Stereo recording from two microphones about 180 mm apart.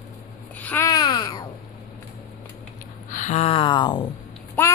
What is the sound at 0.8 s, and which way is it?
Babbling, 20° left (ahead or behind).